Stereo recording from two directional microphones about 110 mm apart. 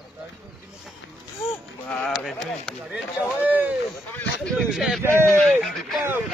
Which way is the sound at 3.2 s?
15° right (ahead or behind).